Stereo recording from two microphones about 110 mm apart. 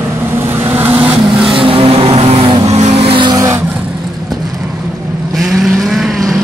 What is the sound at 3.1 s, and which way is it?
Vehicle, 45° right (ahead or behind).